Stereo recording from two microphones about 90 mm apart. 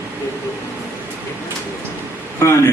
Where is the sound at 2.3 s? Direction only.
30° left (ahead or behind).